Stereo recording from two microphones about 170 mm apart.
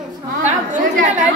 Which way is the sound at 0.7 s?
50° right (ahead or behind).